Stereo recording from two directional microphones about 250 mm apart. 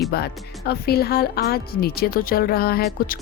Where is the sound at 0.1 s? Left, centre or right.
Left.